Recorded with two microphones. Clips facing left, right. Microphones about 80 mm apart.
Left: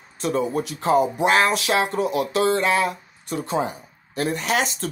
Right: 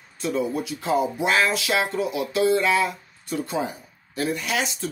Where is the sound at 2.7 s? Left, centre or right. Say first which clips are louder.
Left 1 dB; left.